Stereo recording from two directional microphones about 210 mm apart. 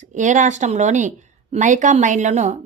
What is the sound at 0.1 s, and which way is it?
Speech, 35° right (ahead or behind).